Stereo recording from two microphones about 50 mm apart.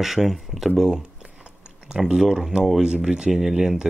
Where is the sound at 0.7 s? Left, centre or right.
Centre.